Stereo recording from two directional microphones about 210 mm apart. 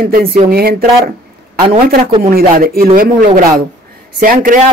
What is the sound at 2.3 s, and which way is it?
Speech, 45° right (ahead or behind).